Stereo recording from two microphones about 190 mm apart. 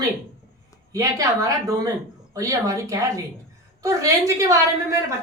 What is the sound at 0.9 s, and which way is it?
A woman's voice, 20° right (ahead or behind).